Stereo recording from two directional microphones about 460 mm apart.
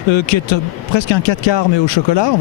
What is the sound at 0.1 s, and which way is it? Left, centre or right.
Speech, left.